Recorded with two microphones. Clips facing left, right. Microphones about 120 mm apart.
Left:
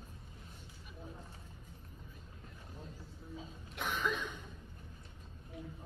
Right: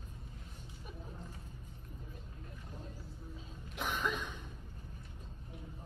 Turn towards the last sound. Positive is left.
turn(degrees=0)  # may be behind; listen again after turning